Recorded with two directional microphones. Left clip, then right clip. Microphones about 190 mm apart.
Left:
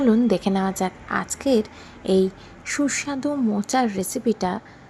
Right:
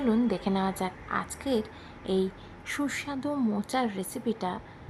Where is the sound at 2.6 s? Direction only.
15° left (ahead or behind).